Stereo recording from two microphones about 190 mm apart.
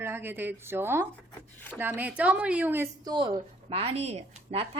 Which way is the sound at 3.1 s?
25° right (ahead or behind).